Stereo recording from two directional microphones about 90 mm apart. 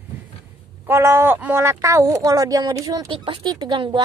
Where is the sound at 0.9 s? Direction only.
25° right (ahead or behind).